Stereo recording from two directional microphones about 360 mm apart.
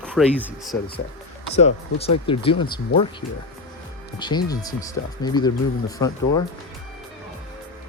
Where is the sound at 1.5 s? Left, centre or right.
Centre.